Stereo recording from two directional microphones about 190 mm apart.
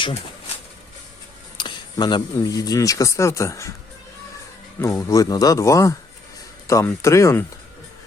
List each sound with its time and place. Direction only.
0.0 s pigeon: 30° left (ahead or behind)
1.5 s speech: 25° left (ahead or behind)
4.8 s speech: 15° left (ahead or behind)